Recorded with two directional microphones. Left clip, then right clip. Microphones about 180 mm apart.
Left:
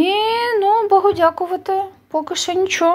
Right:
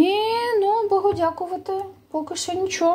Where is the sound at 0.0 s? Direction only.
5° right (ahead or behind).